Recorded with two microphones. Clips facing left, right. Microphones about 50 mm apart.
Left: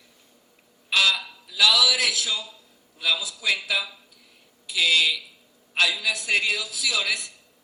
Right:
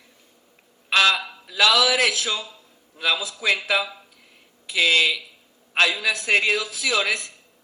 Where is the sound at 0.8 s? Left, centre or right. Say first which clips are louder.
Right 4 dB; right.